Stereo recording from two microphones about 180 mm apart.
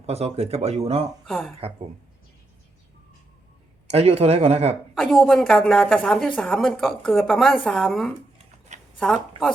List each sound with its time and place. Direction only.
0.0 s speech: 35° right (ahead or behind)
1.2 s a woman's voice: centre (ahead or behind)
3.8 s speech: 35° right (ahead or behind)
4.9 s a woman's voice: centre (ahead or behind)